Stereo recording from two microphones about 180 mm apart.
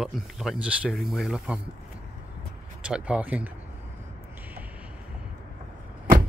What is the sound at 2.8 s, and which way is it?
Speech, 5° right (ahead or behind).